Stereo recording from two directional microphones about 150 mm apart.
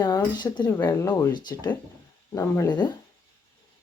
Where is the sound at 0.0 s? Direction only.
30° left (ahead or behind).